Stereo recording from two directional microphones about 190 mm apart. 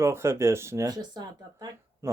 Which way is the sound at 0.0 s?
15° right (ahead or behind).